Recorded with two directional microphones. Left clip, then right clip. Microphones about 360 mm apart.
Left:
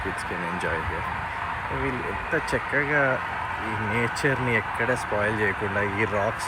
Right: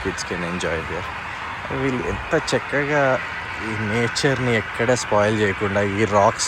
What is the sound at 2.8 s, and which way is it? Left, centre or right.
Speech, centre.